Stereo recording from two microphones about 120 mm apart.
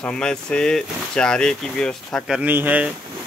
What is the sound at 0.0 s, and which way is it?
Speech, 5° left (ahead or behind).